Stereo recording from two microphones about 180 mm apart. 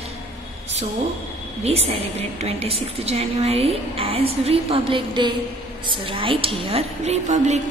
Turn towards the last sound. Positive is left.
turn(degrees=-40)  # may be behind; listen again after turning